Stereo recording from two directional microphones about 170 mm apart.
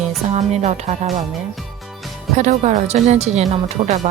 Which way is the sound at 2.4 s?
45° right (ahead or behind).